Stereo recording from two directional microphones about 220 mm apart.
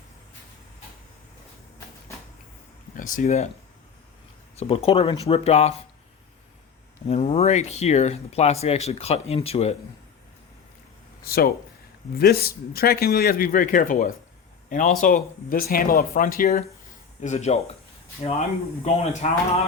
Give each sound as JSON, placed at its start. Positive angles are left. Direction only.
{"t": 2.9, "sound": "speech", "side_deg": 40}
{"t": 4.5, "sound": "speech", "side_deg": 25}
{"t": 7.1, "sound": "speech", "side_deg": 30}
{"t": 11.2, "sound": "speech", "side_deg": 45}
{"t": 17.2, "sound": "speech", "side_deg": 30}